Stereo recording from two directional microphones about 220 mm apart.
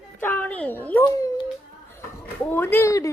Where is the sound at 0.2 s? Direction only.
10° left (ahead or behind).